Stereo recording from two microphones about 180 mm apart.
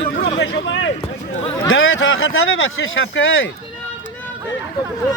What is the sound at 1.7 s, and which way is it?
Speech, 90° left.